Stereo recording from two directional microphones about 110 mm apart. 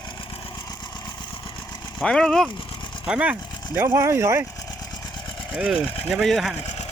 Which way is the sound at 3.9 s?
25° right (ahead or behind).